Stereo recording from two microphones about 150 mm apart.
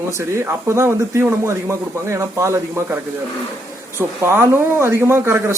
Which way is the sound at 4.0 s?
15° right (ahead or behind).